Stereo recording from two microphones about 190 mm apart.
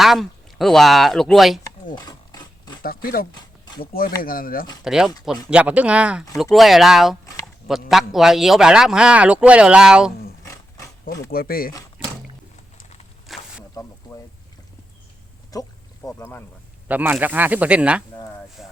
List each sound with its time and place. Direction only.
0.0 s a man's voice: centre (ahead or behind)
2.0 s rub: 20° left (ahead or behind)
2.8 s speech: 50° left (ahead or behind)
4.8 s a man's voice: 5° right (ahead or behind)
10.4 s wild animals: 20° left (ahead or behind)
11.3 s speech: 50° left (ahead or behind)
12.7 s walk: 35° left (ahead or behind)
13.2 s a sound: centre (ahead or behind)
15.5 s speech: 20° left (ahead or behind)
16.9 s speech: 10° right (ahead or behind)
18.2 s a sound: 10° left (ahead or behind)